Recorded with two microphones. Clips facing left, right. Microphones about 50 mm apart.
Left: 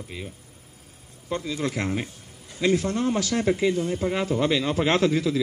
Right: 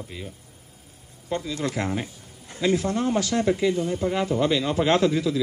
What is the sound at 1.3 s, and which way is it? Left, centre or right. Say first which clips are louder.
Speech: even; left.